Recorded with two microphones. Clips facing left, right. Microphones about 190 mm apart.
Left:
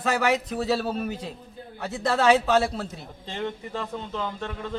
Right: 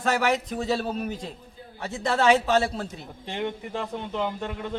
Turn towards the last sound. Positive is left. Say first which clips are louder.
# right 2 dB
turn(degrees=-15)  # may be behind; listen again after turning